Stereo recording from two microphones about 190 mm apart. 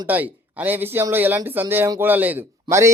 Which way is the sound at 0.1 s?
10° right (ahead or behind).